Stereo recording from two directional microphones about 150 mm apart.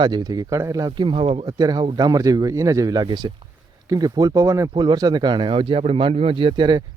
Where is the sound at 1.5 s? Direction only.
25° right (ahead or behind).